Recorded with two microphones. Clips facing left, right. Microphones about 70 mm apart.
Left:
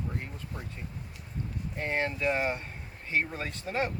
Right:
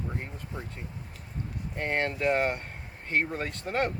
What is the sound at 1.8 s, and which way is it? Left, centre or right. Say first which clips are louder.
Speech: right 2 dB; right.